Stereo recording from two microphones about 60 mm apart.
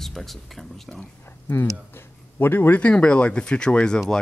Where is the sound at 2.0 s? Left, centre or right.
Left.